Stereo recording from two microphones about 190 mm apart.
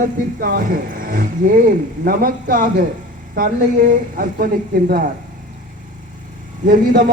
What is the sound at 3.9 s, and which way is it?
A man's voice, 50° right (ahead or behind).